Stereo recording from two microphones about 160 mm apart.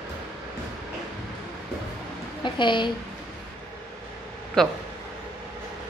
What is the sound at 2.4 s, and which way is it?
Speech, 30° left (ahead or behind).